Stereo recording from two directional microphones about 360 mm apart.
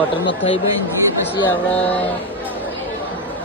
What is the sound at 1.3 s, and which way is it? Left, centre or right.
Speech, centre.